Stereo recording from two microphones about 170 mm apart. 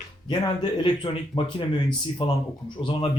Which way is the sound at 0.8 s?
30° left (ahead or behind).